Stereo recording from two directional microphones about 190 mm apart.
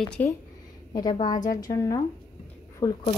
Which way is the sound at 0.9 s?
25° left (ahead or behind).